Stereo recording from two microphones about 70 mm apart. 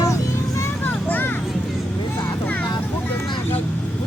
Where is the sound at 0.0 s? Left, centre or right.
Left.